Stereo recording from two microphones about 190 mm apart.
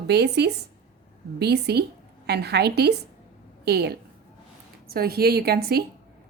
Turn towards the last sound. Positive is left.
turn(degrees=-55)  # may be behind; listen again after turning